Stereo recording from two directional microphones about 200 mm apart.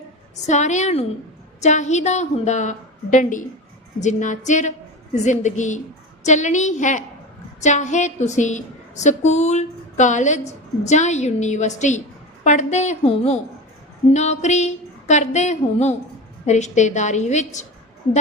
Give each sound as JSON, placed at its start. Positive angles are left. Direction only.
{"t": 0.4, "sound": "a woman's voice", "side_deg": 35}